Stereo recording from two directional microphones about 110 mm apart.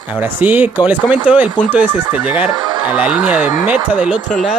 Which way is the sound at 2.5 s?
40° right (ahead or behind).